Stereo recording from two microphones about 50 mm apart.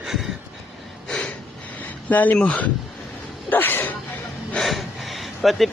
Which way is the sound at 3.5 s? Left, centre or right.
Left.